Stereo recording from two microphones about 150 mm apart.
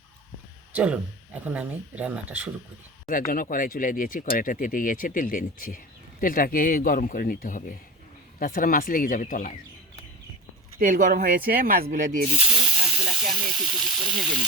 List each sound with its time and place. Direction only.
0.7 s speech: 10° right (ahead or behind)
3.1 s speech: 70° left (ahead or behind)
10.8 s speech: 60° right (ahead or behind)
12.4 s snake: 10° right (ahead or behind)
13.6 s speech: 5° right (ahead or behind)